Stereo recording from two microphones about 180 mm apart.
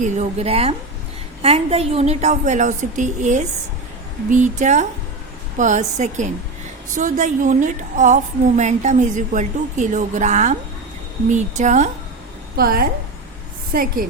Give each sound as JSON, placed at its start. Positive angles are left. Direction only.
{"t": 0.0, "sound": "a woman's voice", "side_deg": -40}
{"t": 12.5, "sound": "a woman's voice", "side_deg": -55}